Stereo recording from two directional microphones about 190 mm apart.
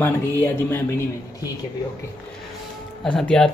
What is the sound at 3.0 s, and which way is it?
Speech, 5° left (ahead or behind).